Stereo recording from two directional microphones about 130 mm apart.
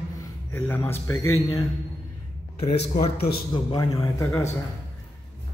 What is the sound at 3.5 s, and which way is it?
Speech, 35° left (ahead or behind).